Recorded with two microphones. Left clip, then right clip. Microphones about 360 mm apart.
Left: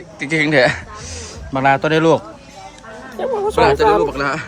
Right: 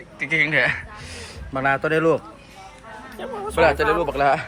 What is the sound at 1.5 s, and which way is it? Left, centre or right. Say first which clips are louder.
Speech: left 6 dB; left.